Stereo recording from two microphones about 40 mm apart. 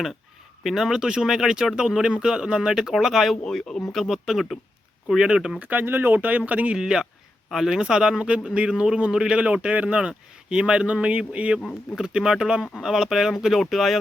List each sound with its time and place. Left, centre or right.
0.6 s speech: centre
0.9 s speech: centre
3.4 s speech: centre
4.1 s speech: centre
5.0 s a man's voice: right
5.5 s speech: right
5.8 s speech: right
6.2 s a man's voice: right
6.7 s speech: centre
7.8 s a man's voice: centre
10.1 s a man's voice: right
11.9 s a man's voice: centre
12.8 s speech: centre